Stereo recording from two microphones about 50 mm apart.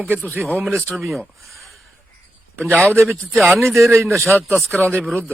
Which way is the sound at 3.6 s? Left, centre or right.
Right.